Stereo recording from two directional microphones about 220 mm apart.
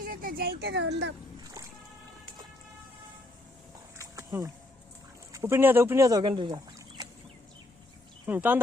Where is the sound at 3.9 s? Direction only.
15° right (ahead or behind).